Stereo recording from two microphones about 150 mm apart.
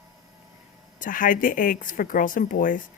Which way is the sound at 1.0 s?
65° left (ahead or behind).